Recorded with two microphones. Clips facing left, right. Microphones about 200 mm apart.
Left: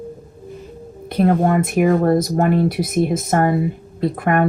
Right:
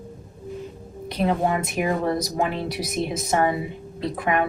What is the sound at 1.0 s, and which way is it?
Speech, 50° left (ahead or behind).